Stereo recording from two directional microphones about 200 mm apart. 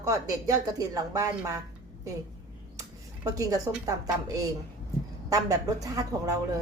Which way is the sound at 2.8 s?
15° right (ahead or behind).